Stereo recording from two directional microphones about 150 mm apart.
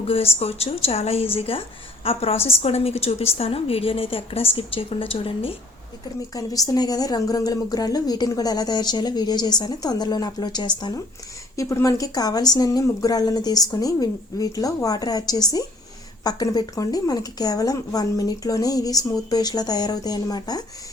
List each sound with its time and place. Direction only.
0.3 s a woman's voice: 45° left (ahead or behind)
6.3 s a woman's voice: 25° left (ahead or behind)